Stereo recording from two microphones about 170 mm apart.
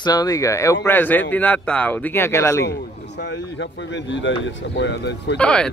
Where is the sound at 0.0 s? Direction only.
20° left (ahead or behind).